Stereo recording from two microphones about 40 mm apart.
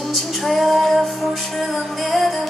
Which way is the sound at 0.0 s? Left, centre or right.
Centre.